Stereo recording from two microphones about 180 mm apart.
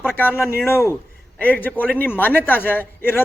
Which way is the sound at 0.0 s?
10° left (ahead or behind).